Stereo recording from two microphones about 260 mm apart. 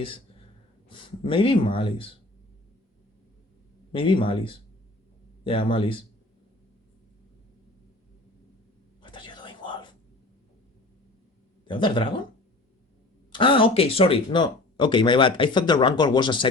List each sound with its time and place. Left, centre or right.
0.9 s speech: centre
3.9 s speech: centre
9.0 s whispering: centre
11.6 s speech: centre
13.3 s speech: centre